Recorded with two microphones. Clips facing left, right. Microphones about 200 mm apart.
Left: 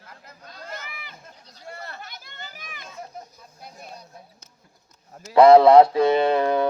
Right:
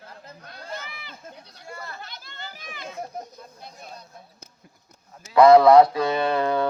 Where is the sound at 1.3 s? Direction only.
60° right (ahead or behind).